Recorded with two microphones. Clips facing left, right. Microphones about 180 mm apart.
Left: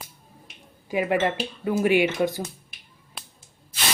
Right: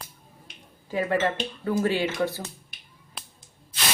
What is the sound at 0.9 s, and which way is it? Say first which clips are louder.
Speech: left 2 dB; 15° left (ahead or behind).